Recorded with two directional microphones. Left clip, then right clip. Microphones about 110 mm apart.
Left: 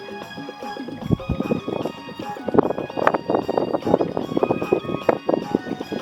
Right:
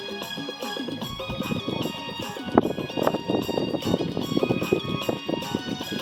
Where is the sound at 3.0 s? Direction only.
30° left (ahead or behind).